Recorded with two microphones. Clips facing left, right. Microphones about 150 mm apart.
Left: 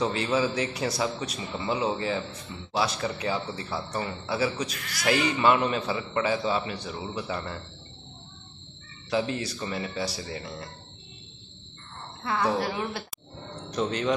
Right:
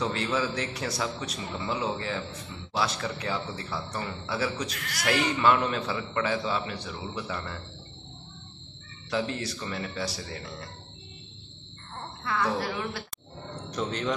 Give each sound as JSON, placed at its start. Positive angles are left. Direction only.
{"t": 0.0, "sound": "a man's voice", "side_deg": 15}
{"t": 9.6, "sound": "a man's voice", "side_deg": 10}
{"t": 12.3, "sound": "a woman's voice", "side_deg": 25}
{"t": 13.7, "sound": "a man's voice", "side_deg": 10}